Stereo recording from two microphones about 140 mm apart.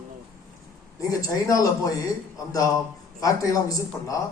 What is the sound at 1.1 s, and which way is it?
Speech, 25° left (ahead or behind).